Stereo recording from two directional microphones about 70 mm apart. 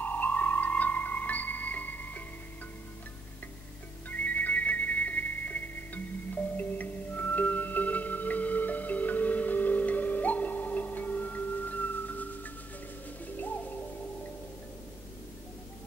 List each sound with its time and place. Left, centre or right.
0.0 s music: left
4.1 s music: left